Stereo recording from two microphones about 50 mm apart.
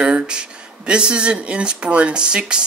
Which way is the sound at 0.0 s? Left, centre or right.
Centre.